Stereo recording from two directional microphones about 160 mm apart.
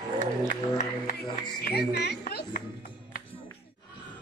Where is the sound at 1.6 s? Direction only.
90° left.